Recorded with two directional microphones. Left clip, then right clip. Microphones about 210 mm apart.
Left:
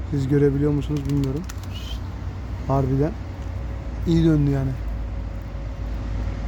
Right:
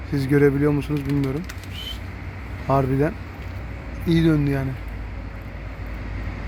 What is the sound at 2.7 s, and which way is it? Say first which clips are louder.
Speech: right 3 dB; 5° right (ahead or behind).